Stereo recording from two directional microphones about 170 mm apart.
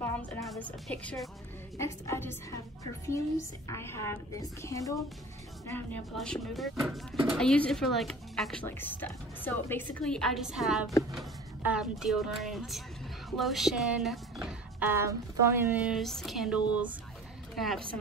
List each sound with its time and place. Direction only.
0.0 s a woman's voice: 10° left (ahead or behind)
1.8 s a woman's voice: 15° left (ahead or behind)
3.6 s a woman's voice: 15° left (ahead or behind); by 14.9 s centre (ahead or behind)
14.9 s a woman's voice: 15° right (ahead or behind); by 17.8 s centre (ahead or behind)